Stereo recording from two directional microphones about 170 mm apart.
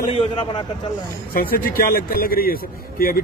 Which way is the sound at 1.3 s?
60° left (ahead or behind).